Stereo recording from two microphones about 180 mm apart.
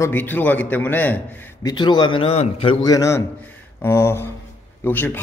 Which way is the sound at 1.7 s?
25° left (ahead or behind).